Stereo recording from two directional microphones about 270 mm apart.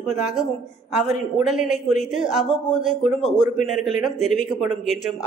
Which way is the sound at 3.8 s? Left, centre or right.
Centre.